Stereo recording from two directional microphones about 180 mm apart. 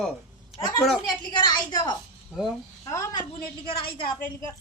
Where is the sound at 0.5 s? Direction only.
20° left (ahead or behind).